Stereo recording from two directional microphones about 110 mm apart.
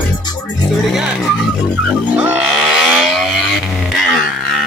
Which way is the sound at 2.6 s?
Centre (ahead or behind).